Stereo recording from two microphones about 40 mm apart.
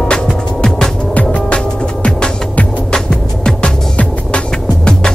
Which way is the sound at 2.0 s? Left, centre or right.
Left.